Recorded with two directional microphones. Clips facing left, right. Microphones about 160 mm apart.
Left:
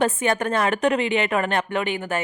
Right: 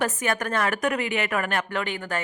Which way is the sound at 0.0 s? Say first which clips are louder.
Left 5 dB; 25° left (ahead or behind).